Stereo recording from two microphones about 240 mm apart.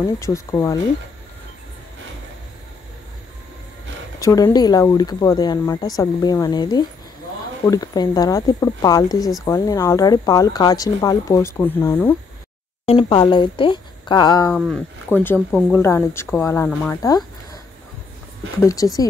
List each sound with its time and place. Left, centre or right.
0.0 s speech: centre
4.2 s speech: centre
12.8 s speech: left
14.5 s speech: centre
18.6 s speech: centre